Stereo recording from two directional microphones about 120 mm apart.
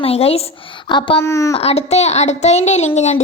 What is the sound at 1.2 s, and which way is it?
Speech, 25° left (ahead or behind).